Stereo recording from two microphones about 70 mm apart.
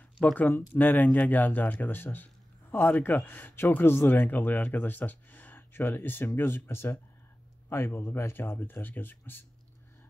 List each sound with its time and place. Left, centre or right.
0.2 s speech: left